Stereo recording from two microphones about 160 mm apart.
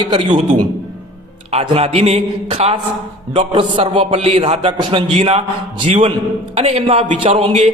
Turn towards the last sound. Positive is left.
turn(degrees=-45)  # may be behind; listen again after turning